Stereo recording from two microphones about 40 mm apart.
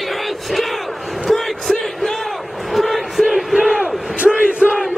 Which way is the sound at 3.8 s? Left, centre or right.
Right.